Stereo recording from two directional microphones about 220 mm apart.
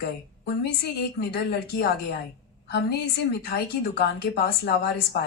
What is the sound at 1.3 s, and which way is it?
A woman's voice, 45° left (ahead or behind).